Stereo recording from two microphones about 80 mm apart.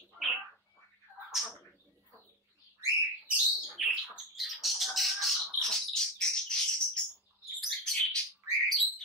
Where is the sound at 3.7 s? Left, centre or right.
Centre.